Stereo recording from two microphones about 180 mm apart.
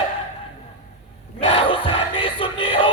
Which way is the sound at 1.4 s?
30° left (ahead or behind).